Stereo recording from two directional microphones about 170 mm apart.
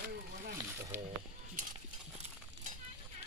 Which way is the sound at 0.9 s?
15° right (ahead or behind).